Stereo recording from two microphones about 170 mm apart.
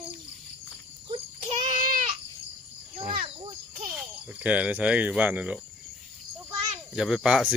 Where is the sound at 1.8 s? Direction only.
55° right (ahead or behind).